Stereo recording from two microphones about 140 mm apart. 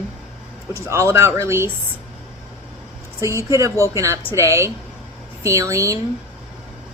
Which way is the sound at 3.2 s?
20° right (ahead or behind).